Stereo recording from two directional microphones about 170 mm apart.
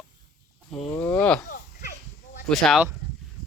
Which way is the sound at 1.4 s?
65° left (ahead or behind).